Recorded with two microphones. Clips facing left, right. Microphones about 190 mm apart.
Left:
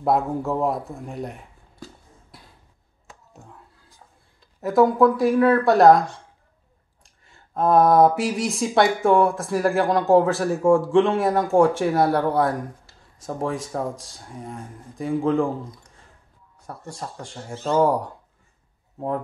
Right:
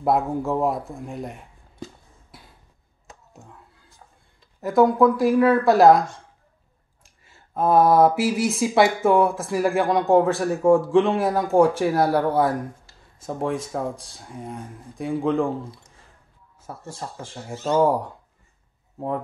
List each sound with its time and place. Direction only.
0.0 s speech: centre (ahead or behind)
2.3 s a sound: centre (ahead or behind)
4.6 s speech: centre (ahead or behind)
15.6 s speech: 30° right (ahead or behind)
16.6 s speech: centre (ahead or behind)